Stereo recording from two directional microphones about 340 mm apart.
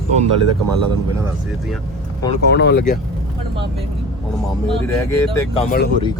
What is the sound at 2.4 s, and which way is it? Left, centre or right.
Speech, left.